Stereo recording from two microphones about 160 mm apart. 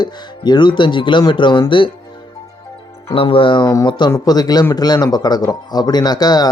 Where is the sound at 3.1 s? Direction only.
35° left (ahead or behind).